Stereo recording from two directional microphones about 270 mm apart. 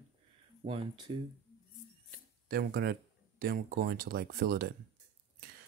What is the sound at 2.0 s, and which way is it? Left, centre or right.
Speech, right.